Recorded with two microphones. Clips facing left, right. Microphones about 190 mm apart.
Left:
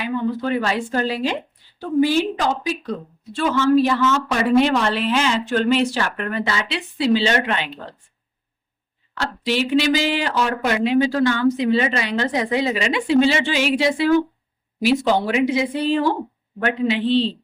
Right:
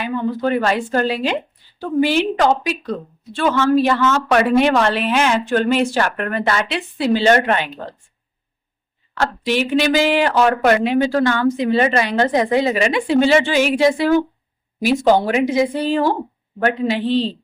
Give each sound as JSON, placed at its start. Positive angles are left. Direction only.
{"t": 0.0, "sound": "a woman's voice", "side_deg": -55}
{"t": 9.1, "sound": "a woman's voice", "side_deg": -50}